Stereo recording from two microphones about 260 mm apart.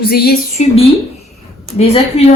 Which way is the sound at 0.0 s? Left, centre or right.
Left.